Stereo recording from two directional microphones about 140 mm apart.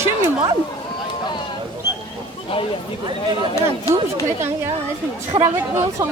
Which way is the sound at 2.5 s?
40° left (ahead or behind).